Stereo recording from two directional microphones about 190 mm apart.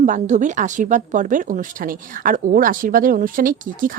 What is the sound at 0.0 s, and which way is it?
Speech, 40° right (ahead or behind).